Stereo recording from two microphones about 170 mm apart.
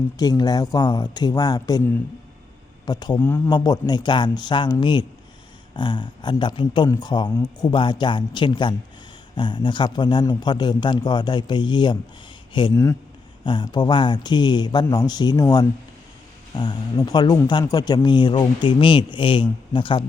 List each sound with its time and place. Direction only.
0.2 s a man's voice: 20° left (ahead or behind)
2.8 s a man's voice: 25° left (ahead or behind)